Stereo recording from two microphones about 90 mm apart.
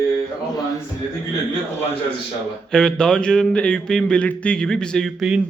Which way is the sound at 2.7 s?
10° left (ahead or behind).